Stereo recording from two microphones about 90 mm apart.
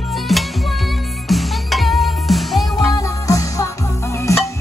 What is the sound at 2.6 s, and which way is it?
Music, 40° left (ahead or behind).